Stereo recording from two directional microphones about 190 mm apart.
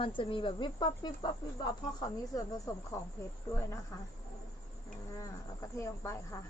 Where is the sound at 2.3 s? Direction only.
15° left (ahead or behind).